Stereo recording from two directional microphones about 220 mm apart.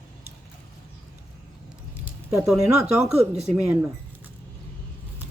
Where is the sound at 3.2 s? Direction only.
30° right (ahead or behind).